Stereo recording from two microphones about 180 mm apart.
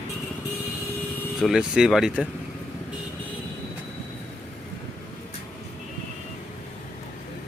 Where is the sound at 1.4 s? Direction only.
Centre (ahead or behind).